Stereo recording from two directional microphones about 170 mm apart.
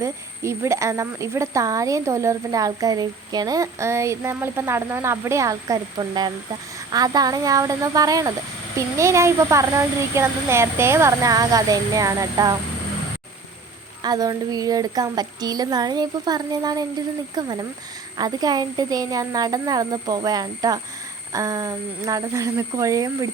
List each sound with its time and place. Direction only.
0.0 s a woman's voice: 15° right (ahead or behind)
14.0 s a woman's voice: 20° right (ahead or behind)